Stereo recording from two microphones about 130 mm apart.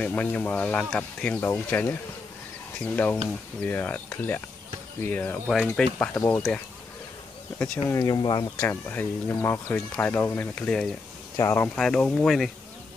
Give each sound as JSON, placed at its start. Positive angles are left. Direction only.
{"t": 0.0, "sound": "speech", "side_deg": 10}
{"t": 7.5, "sound": "speech", "side_deg": 10}
{"t": 7.9, "sound": "speech", "side_deg": 30}
{"t": 8.5, "sound": "speech", "side_deg": 15}
{"t": 11.3, "sound": "speech", "side_deg": 20}
{"t": 11.7, "sound": "speech", "side_deg": 5}